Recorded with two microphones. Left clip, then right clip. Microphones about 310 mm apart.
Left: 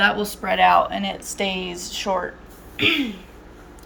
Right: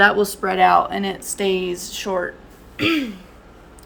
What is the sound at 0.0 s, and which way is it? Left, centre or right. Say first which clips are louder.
Speech: right 5 dB; centre.